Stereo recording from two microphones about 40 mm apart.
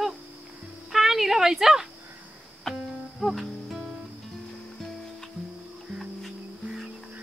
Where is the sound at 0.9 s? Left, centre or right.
Centre.